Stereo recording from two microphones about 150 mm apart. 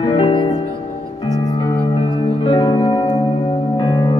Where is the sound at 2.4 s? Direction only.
30° left (ahead or behind).